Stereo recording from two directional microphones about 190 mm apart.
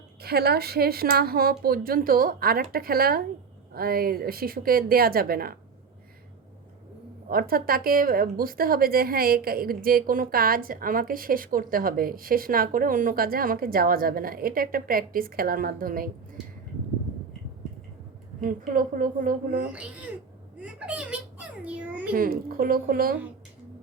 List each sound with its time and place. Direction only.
0.2 s a woman's voice: 55° right (ahead or behind)
7.3 s a woman's voice: 50° right (ahead or behind)
18.4 s a woman's voice: 45° right (ahead or behind)
19.7 s a child's voice: 5° right (ahead or behind)
20.6 s a sound: 5° right (ahead or behind)
22.1 s a woman's voice: 50° right (ahead or behind)